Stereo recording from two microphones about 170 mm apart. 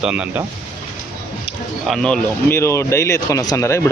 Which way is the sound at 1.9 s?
5° left (ahead or behind).